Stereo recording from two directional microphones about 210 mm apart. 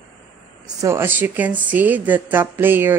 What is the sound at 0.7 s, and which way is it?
A woman's voice, 10° right (ahead or behind).